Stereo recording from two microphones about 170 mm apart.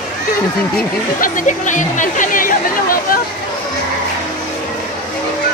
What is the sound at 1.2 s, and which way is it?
Speech, 50° left (ahead or behind).